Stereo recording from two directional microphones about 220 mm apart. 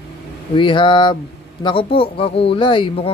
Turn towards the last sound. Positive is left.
turn(degrees=25)  # may be behind; listen again after turning